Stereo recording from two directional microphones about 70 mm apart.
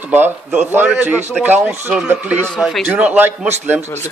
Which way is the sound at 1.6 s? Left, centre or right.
Centre.